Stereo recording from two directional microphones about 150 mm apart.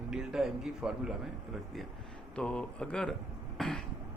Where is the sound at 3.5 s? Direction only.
5° left (ahead or behind).